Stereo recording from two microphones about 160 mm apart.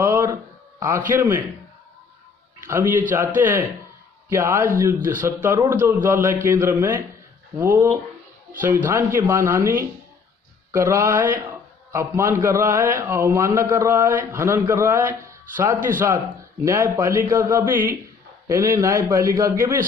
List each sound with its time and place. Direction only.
0.0 s a sound: 20° right (ahead or behind)
1.1 s a man's voice: 10° right (ahead or behind)
2.6 s a man's voice: 15° right (ahead or behind)